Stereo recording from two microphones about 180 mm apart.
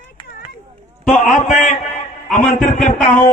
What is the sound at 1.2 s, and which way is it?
Speech, 40° left (ahead or behind).